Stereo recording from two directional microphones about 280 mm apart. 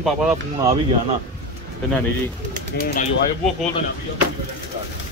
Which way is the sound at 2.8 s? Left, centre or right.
Left.